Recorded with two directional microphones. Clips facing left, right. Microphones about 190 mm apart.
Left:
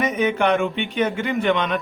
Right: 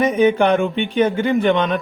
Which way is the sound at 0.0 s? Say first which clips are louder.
Right 5 dB; 30° right (ahead or behind).